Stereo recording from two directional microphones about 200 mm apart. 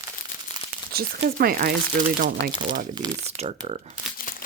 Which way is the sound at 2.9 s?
30° right (ahead or behind).